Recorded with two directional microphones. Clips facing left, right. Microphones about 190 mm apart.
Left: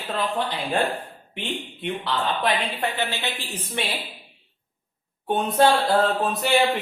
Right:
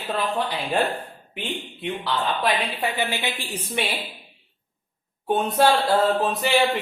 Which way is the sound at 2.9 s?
10° right (ahead or behind).